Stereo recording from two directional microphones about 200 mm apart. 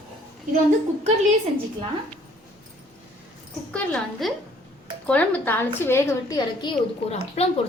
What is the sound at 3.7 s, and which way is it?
A woman's voice, 5° left (ahead or behind).